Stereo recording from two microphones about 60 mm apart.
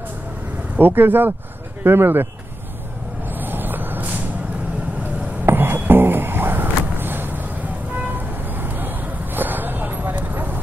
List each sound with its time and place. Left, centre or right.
0.7 s speech: right
3.3 s vehicle: right
5.4 s music: right
8.5 s vehicle: right